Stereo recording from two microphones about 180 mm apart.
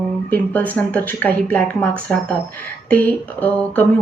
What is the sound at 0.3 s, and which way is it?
Speech, 10° left (ahead or behind).